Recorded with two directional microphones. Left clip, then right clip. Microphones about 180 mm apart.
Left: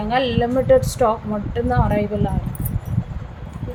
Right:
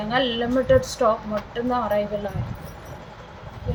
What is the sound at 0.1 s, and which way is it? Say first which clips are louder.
A woman's voice: left 3 dB; 25° left (ahead or behind).